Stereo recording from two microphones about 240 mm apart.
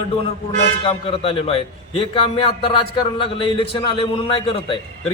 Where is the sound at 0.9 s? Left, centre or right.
Left.